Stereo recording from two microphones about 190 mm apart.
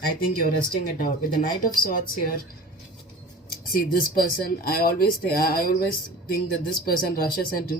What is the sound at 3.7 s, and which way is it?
Speech, 50° left (ahead or behind).